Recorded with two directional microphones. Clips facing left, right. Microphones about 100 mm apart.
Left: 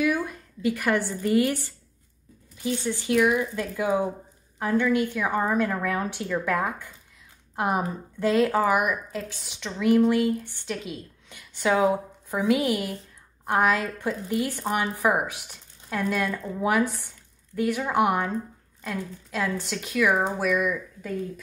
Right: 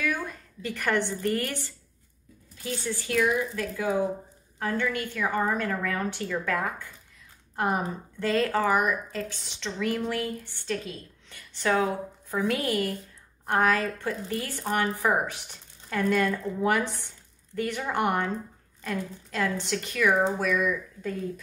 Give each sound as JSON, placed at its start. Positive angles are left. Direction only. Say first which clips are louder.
{"t": 0.1, "sound": "a woman's voice", "louder": "left 5 dB", "side_deg": 5}